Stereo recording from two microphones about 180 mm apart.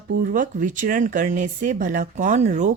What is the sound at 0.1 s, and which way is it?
Speech, 50° right (ahead or behind).